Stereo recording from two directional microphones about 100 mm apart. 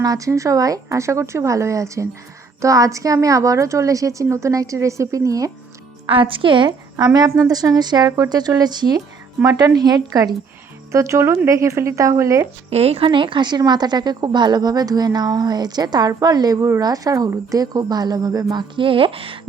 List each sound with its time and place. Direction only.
0.0 s a woman's voice: 35° right (ahead or behind)
6.1 s speech: 60° right (ahead or behind)
7.0 s a woman's voice: 40° right (ahead or behind)
12.7 s a woman's voice: 85° right; by 18.6 s 40° right (ahead or behind)
18.8 s speech: 60° right (ahead or behind)